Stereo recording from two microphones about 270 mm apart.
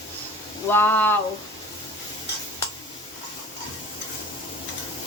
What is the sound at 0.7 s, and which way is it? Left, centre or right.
Speech, centre.